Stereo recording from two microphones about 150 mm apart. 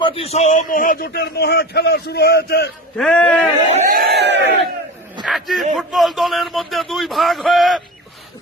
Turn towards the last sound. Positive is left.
turn(degrees=0)  # may be behind; listen again after turning